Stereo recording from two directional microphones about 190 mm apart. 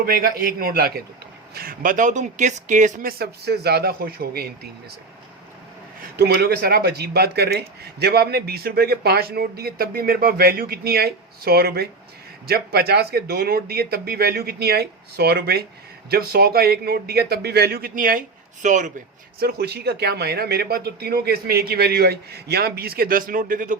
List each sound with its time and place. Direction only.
0.0 s speech: 50° right (ahead or behind)
6.1 s speech: 55° right (ahead or behind); by 18.9 s 40° right (ahead or behind)
19.4 s speech: 55° right (ahead or behind)